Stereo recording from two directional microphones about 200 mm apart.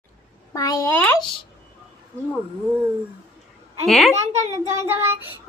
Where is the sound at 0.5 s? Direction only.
15° left (ahead or behind).